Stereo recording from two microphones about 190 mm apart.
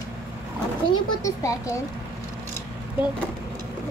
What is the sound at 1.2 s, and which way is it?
Speech, 15° left (ahead or behind).